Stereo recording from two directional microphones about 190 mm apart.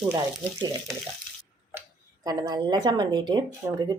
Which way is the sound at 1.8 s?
20° right (ahead or behind).